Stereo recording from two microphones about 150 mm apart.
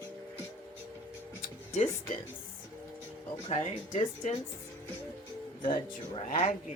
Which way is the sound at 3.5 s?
50° left (ahead or behind).